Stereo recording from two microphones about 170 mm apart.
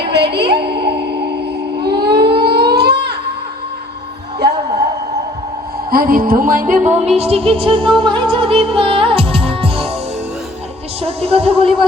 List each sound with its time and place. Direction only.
0.1 s a woman's voice: 75° right (ahead or behind)
0.6 s a sound: 75° right (ahead or behind)
1.8 s civil defense siren: 75° right (ahead or behind)
5.9 s music: 60° right (ahead or behind)
7.2 s speech: 35° right (ahead or behind)
7.9 s music: 30° right (ahead or behind)
11.0 s speech: 35° right (ahead or behind)